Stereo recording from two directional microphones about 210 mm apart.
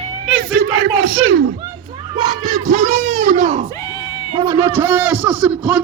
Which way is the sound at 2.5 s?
35° right (ahead or behind).